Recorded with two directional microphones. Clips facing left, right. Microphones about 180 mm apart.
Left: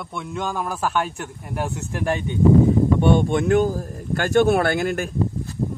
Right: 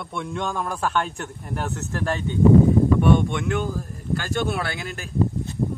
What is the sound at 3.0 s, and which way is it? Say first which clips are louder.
Speech: left 2 dB; 30° left (ahead or behind).